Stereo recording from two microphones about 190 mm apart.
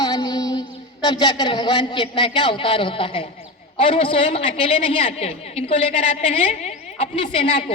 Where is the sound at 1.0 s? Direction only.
20° left (ahead or behind).